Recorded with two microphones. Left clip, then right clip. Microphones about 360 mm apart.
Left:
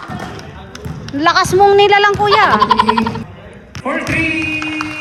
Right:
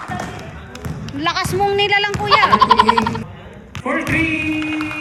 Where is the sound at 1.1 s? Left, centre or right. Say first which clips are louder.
Left 8 dB; centre.